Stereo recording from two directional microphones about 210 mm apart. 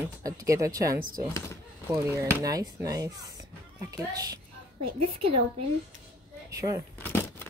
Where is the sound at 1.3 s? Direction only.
15° left (ahead or behind).